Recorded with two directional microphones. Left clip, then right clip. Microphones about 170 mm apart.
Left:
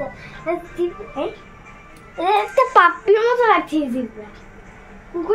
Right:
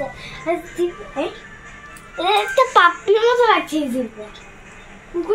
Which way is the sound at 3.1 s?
10° left (ahead or behind).